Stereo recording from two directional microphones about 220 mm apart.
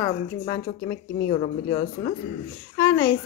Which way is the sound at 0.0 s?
15° left (ahead or behind).